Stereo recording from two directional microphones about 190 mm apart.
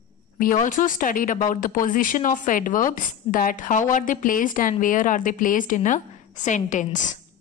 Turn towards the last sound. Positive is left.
turn(degrees=40)  # may be behind; listen again after turning